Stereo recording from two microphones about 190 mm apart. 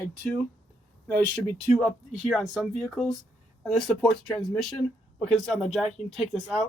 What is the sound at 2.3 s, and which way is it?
Speech, centre (ahead or behind).